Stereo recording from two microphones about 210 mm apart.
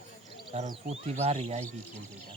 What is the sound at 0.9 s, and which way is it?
Speech, 30° right (ahead or behind).